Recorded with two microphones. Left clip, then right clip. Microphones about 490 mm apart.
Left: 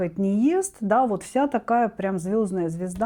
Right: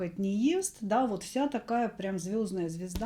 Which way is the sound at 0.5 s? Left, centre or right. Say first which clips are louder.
Left 8 dB; left.